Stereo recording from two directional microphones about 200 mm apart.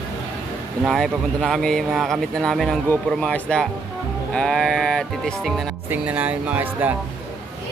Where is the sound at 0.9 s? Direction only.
Centre (ahead or behind).